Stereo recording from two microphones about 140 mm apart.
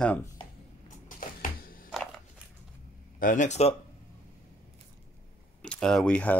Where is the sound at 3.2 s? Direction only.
65° left (ahead or behind).